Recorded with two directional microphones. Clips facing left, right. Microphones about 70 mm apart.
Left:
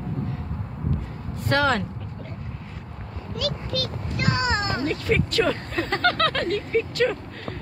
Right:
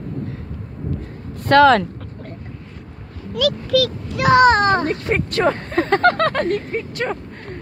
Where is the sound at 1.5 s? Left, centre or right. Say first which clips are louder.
Right 10 dB; right.